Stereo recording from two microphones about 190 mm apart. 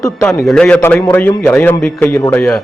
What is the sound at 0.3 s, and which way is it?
A man's voice, centre (ahead or behind).